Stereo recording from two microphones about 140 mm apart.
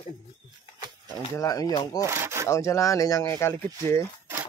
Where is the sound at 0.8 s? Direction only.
30° right (ahead or behind).